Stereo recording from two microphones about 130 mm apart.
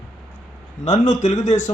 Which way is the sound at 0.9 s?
65° left (ahead or behind).